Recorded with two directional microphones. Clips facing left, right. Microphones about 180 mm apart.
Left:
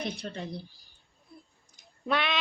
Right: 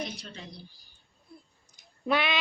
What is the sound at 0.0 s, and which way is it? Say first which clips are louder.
Speech: left 3 dB; 55° left (ahead or behind).